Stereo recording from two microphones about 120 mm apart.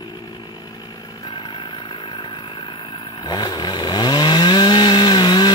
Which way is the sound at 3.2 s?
35° left (ahead or behind).